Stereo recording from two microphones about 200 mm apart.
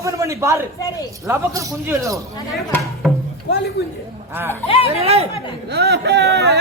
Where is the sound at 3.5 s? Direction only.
60° left (ahead or behind).